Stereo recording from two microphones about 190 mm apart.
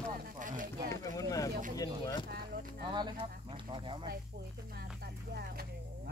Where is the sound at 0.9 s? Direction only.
15° left (ahead or behind).